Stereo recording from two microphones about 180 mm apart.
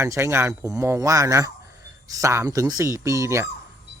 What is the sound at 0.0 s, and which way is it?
Speech, 15° right (ahead or behind).